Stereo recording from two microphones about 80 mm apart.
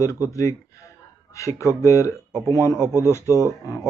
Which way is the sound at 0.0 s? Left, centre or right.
Left.